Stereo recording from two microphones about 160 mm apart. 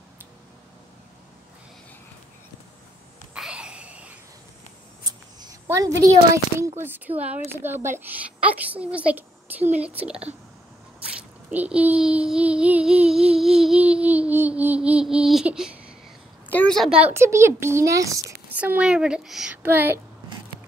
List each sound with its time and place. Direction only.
3.3 s a sound: 5° right (ahead or behind)
5.4 s a woman's voice: 20° right (ahead or behind)
6.8 s child singing: 10° right (ahead or behind)
11.5 s child singing: 10° right (ahead or behind)
16.4 s a woman's voice: 10° left (ahead or behind)
17.0 s child singing: 15° right (ahead or behind)
18.6 s child singing: 10° right (ahead or behind)